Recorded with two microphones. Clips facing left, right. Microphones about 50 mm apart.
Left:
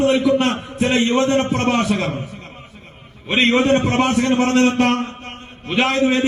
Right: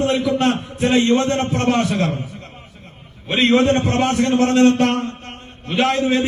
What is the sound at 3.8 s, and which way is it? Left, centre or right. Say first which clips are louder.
Speech: left 1 dB; centre.